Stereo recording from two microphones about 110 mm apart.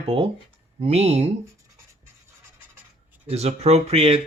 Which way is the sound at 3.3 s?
75° right (ahead or behind).